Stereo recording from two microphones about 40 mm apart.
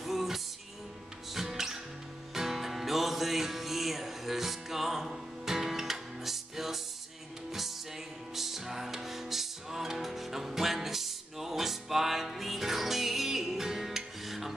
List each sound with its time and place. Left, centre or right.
0.0 s music: centre
8.4 s music: centre